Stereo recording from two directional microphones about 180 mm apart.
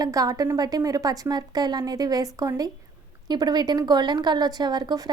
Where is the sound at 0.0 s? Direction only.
20° right (ahead or behind).